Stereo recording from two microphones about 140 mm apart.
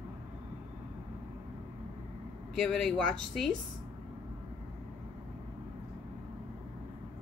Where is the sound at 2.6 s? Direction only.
5° left (ahead or behind).